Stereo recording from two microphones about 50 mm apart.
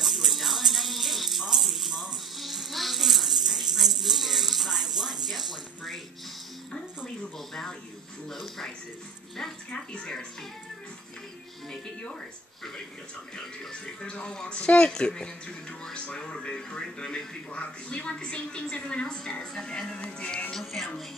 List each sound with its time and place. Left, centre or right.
0.0 s music: centre
7.3 s speech: centre
9.8 s speech: centre
13.7 s speech: centre
20.5 s speech: centre